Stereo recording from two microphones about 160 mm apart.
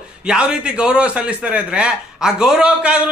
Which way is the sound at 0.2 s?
5° right (ahead or behind).